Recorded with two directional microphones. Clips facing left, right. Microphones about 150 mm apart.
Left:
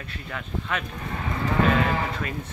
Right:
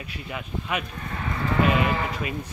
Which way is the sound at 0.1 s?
15° right (ahead or behind).